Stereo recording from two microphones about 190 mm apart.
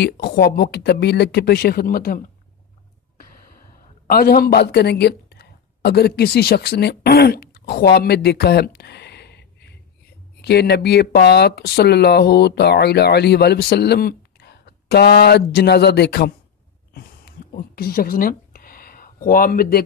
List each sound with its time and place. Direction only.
0.0 s speech: 55° left (ahead or behind)
4.1 s a woman's voice: 55° left (ahead or behind)
16.9 s a sound: 55° left (ahead or behind)